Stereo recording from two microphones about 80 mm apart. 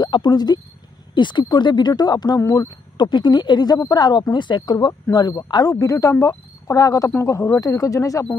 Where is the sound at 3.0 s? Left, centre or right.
Left.